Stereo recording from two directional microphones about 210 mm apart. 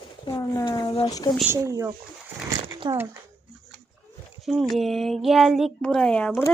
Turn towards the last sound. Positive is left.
turn(degrees=5)  # may be behind; listen again after turning